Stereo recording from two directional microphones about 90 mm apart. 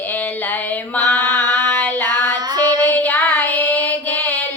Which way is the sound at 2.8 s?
20° left (ahead or behind).